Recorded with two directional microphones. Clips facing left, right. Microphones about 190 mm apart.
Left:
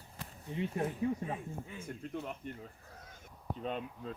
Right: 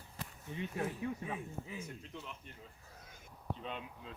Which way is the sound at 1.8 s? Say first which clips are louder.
Left 6 dB; 55° left (ahead or behind).